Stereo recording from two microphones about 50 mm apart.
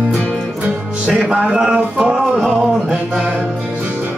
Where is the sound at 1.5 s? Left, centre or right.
Centre.